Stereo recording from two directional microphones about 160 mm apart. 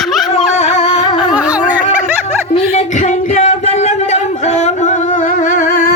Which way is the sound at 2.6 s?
45° left (ahead or behind).